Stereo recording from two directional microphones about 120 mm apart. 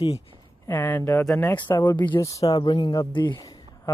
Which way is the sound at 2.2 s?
25° left (ahead or behind).